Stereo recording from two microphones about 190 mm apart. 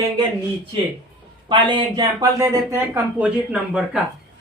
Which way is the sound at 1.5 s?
25° right (ahead or behind).